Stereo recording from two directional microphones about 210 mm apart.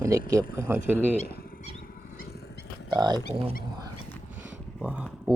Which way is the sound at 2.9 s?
20° right (ahead or behind).